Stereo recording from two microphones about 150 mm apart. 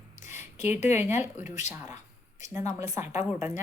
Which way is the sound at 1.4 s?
50° left (ahead or behind).